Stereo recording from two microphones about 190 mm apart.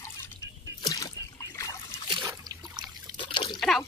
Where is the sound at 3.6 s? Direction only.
Centre (ahead or behind).